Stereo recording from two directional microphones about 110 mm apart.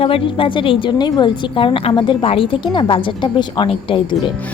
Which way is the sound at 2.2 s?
60° left (ahead or behind).